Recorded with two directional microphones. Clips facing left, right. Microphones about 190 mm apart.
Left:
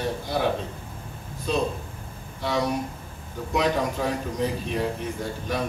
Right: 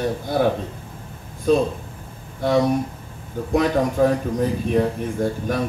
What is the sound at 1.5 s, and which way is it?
A man's voice, 50° right (ahead or behind).